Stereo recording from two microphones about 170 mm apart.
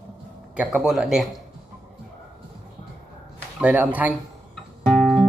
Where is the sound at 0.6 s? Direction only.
5° right (ahead or behind).